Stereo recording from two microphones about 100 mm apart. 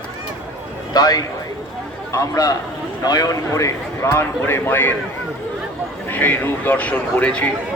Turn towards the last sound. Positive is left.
turn(degrees=10)  # may be behind; listen again after turning